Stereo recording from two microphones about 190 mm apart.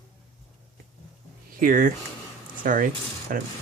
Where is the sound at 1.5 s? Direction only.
50° right (ahead or behind).